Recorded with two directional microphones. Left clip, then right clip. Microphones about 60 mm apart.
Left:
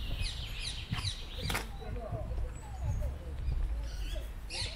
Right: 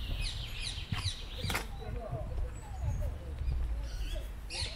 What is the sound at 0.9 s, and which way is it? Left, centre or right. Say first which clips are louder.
Bird: even; centre.